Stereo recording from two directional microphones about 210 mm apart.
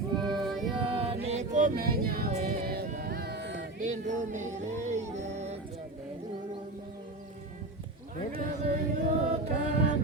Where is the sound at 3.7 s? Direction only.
35° right (ahead or behind).